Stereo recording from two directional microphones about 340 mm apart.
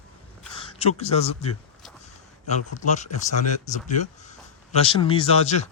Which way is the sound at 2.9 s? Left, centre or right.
Left.